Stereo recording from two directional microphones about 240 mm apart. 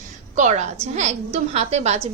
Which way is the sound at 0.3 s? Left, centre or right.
Right.